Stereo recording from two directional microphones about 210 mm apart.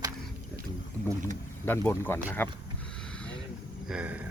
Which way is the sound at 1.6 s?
10° left (ahead or behind).